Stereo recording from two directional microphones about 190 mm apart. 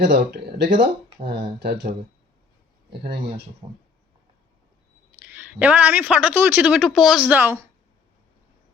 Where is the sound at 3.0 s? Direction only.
60° right (ahead or behind).